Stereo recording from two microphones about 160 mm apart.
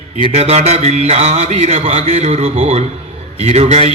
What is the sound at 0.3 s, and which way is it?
A man's voice, 40° right (ahead or behind).